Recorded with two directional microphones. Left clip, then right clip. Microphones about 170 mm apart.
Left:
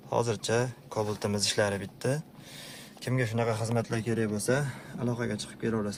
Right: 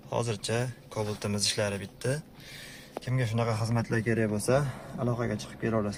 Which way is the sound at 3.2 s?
10° left (ahead or behind).